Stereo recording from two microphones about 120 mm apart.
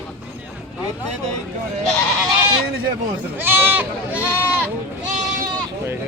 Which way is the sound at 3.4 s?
20° right (ahead or behind).